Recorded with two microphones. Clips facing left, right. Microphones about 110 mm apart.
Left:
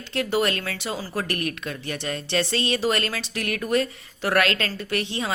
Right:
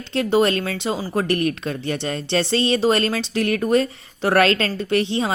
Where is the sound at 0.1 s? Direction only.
25° right (ahead or behind).